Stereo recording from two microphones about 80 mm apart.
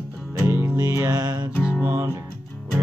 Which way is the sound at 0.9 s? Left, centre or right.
Right.